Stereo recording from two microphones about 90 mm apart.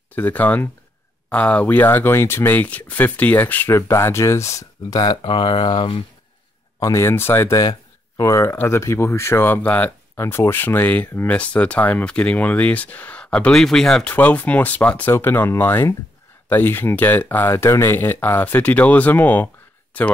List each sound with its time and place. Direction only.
0.1 s speech: 20° left (ahead or behind); by 5.2 s 50° left (ahead or behind)
5.2 s speech: 70° left (ahead or behind)
6.8 s speech: 35° left (ahead or behind); by 14.1 s 5° left (ahead or behind)
14.1 s speech: 20° left (ahead or behind)